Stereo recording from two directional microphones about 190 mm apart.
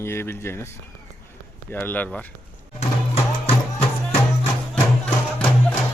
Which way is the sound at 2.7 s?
35° left (ahead or behind).